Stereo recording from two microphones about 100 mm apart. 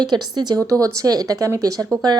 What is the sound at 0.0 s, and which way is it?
Speech, 45° right (ahead or behind).